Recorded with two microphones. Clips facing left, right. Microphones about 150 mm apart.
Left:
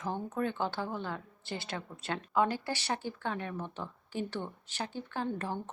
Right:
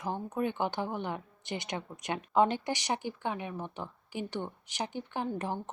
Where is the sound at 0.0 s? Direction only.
10° right (ahead or behind).